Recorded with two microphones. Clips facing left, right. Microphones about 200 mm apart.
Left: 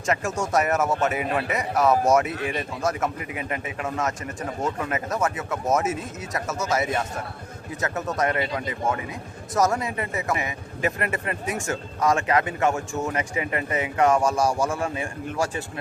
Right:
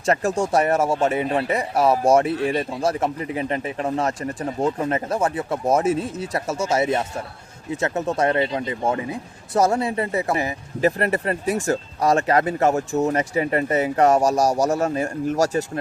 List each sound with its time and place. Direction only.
0.0 s speech: 35° right (ahead or behind)